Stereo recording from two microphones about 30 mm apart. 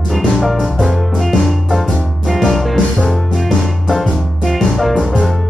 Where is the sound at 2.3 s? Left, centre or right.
Centre.